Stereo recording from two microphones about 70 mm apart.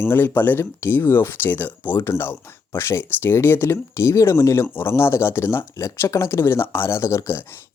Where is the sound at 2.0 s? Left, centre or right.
Left.